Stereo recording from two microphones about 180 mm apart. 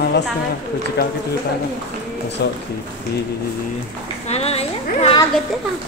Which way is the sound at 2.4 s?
65° left (ahead or behind).